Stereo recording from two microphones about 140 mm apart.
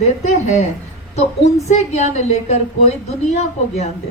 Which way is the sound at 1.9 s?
55° left (ahead or behind).